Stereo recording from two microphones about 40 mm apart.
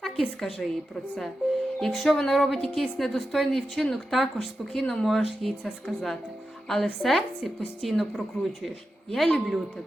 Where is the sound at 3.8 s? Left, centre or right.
Centre.